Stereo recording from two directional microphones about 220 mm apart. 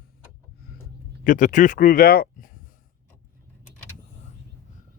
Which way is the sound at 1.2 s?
35° left (ahead or behind).